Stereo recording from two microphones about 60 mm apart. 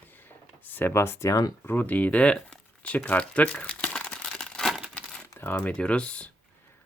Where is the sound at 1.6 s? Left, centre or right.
Left.